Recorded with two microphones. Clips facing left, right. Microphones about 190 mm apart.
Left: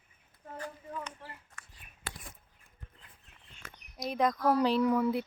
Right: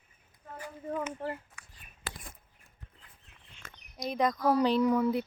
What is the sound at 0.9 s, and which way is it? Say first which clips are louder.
Speech: right 9 dB; 55° right (ahead or behind).